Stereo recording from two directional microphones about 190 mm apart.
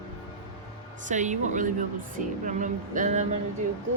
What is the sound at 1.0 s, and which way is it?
Speech, 40° right (ahead or behind).